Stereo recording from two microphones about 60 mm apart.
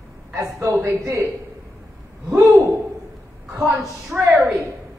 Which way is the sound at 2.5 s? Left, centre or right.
Right.